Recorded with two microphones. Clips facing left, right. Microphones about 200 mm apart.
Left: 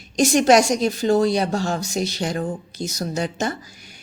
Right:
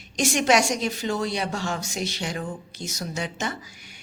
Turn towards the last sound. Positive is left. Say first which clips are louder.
# left 6 dB
turn(degrees=40)  # may be behind; listen again after turning